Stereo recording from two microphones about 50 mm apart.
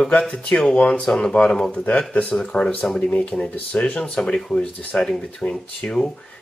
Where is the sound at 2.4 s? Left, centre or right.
Centre.